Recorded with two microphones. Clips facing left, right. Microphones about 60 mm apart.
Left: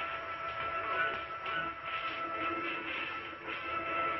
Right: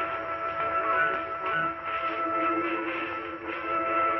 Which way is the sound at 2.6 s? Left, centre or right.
Right.